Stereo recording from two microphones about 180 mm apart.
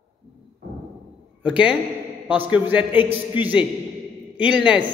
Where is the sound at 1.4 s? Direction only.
5° right (ahead or behind).